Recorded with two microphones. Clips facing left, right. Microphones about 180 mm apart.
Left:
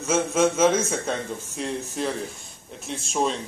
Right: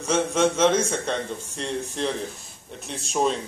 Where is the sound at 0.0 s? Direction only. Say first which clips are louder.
Even; 5° left (ahead or behind).